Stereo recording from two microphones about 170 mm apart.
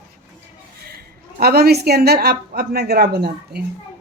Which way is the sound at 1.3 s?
65° right (ahead or behind).